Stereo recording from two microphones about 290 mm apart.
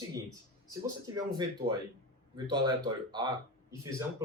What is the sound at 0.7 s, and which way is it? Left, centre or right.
Speech, centre.